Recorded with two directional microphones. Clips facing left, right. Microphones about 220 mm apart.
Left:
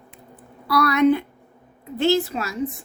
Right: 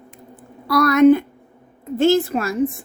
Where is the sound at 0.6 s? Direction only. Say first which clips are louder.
Right 5 dB; 45° right (ahead or behind).